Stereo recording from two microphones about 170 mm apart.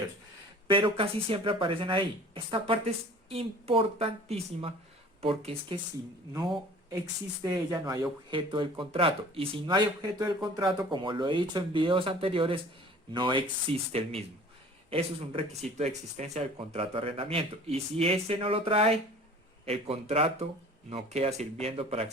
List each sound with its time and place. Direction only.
0.7 s speech: 30° right (ahead or behind)
7.4 s speech: 20° right (ahead or behind)